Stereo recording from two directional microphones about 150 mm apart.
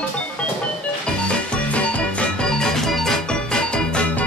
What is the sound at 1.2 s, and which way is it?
Music, 10° left (ahead or behind).